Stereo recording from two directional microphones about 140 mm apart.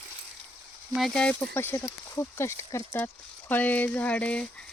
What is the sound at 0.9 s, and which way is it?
Speech, centre (ahead or behind).